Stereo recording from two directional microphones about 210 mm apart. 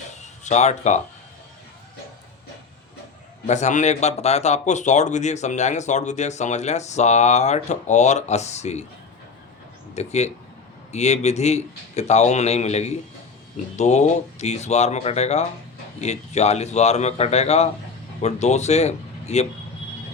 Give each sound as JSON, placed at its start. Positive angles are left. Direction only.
{"t": 0.4, "sound": "speech", "side_deg": 35}
{"t": 3.4, "sound": "speech", "side_deg": 35}
{"t": 9.9, "sound": "speech", "side_deg": 30}